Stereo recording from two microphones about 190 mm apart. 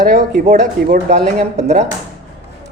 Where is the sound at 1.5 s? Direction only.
35° right (ahead or behind).